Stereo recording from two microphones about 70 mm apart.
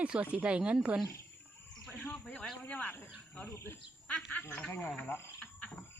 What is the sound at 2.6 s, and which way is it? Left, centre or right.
Speech, left.